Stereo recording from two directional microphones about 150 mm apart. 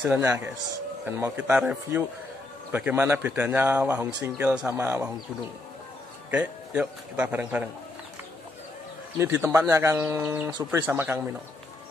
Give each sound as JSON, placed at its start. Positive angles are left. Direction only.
{"t": 0.0, "sound": "speech", "side_deg": -15}
{"t": 6.3, "sound": "speech", "side_deg": -10}
{"t": 9.2, "sound": "speech", "side_deg": -20}